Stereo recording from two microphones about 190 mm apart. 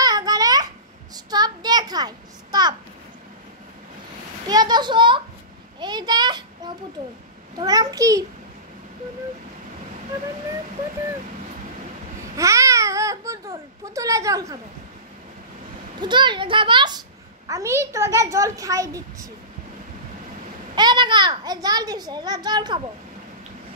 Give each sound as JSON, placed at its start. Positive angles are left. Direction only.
{"t": 0.0, "sound": "babbling", "side_deg": -20}
{"t": 1.1, "sound": "a sound", "side_deg": -20}
{"t": 4.5, "sound": "a child's voice", "side_deg": -20}
{"t": 5.8, "sound": "a sound", "side_deg": -20}
{"t": 7.5, "sound": "a child's voice", "side_deg": -20}
{"t": 12.4, "sound": "speech", "side_deg": -15}
{"t": 16.0, "sound": "a child's voice", "side_deg": -25}
{"t": 20.7, "sound": "a child's voice", "side_deg": -25}